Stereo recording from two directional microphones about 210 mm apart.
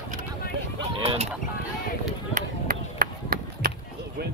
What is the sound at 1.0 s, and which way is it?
Goose, 30° right (ahead or behind).